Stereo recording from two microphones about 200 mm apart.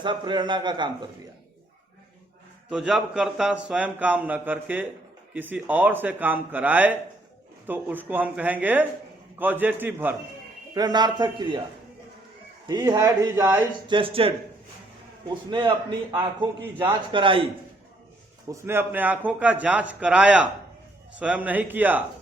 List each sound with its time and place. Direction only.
0.0 s a man's voice: 25° right (ahead or behind)
2.6 s a man's voice: centre (ahead or behind)
10.8 s a man's voice: 20° right (ahead or behind)
12.6 s a man's voice: 20° right (ahead or behind)
13.8 s a man's voice: 25° right (ahead or behind)
18.4 s a man's voice: 15° right (ahead or behind)